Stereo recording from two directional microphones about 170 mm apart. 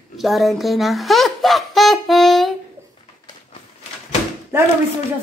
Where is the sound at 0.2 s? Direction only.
Centre (ahead or behind).